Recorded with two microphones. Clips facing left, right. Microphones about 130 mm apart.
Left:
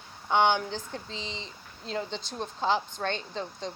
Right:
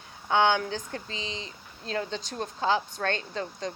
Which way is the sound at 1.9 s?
70° right (ahead or behind).